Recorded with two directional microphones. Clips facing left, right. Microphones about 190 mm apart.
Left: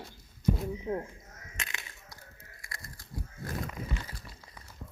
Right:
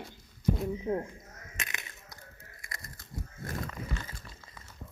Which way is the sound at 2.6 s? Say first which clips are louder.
Even; 20° right (ahead or behind).